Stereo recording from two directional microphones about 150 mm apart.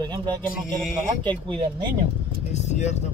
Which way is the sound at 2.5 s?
50° left (ahead or behind).